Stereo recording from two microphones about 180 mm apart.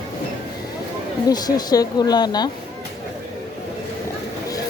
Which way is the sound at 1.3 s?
20° left (ahead or behind).